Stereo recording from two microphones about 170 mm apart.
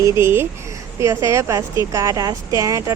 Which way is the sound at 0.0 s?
15° right (ahead or behind).